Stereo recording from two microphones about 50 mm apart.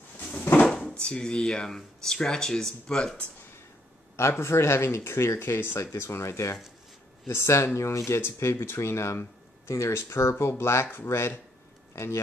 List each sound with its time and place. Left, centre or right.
0.2 s a sound: left
0.7 s drawer open or close: centre
0.9 s speech: centre
4.2 s speech: left
5.8 s speech: left
10.6 s speech: left
11.1 s speech: left